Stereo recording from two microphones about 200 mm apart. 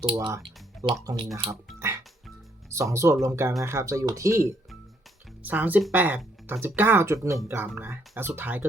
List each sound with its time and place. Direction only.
0.0 s speech: 25° right (ahead or behind)
1.5 s music: 15° right (ahead or behind)
2.6 s speech: 15° right (ahead or behind)
7.3 s speech: centre (ahead or behind)